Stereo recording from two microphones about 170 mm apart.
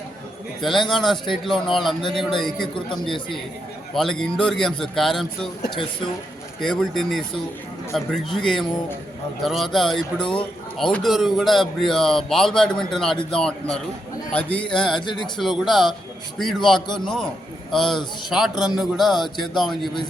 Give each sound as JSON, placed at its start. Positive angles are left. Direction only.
{"t": 0.6, "sound": "speech", "side_deg": 0}
{"t": 3.9, "sound": "speech", "side_deg": 0}
{"t": 6.6, "sound": "speech", "side_deg": 0}
{"t": 18.5, "sound": "a man's voice", "side_deg": 25}
{"t": 18.8, "sound": "speech", "side_deg": 0}